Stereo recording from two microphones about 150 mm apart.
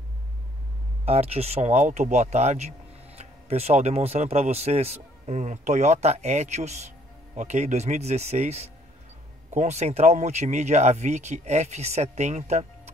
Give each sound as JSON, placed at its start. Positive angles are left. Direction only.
{"t": 1.0, "sound": "speech", "side_deg": -40}